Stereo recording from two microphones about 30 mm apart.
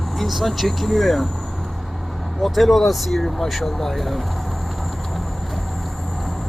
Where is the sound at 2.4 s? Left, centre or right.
Centre.